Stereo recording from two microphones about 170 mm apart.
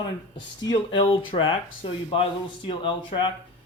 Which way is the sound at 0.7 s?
25° left (ahead or behind).